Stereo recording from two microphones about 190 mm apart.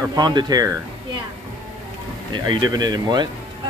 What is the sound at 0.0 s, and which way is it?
Speech, 20° right (ahead or behind).